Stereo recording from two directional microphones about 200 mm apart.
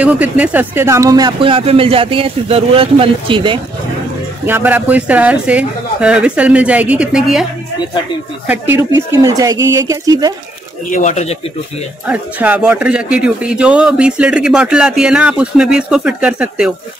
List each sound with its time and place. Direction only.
0.0 s speech: 5° right (ahead or behind); by 3.5 s 25° right (ahead or behind)
4.5 s speech: 10° right (ahead or behind)
8.5 s speech: 10° right (ahead or behind)
10.9 s speech: 40° left (ahead or behind)
12.1 s speech: 5° right (ahead or behind)